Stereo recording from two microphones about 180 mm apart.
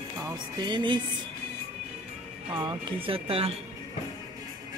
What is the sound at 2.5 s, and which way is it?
Speech, 25° right (ahead or behind).